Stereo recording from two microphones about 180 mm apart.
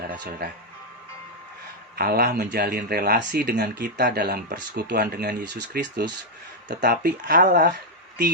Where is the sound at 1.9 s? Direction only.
55° right (ahead or behind).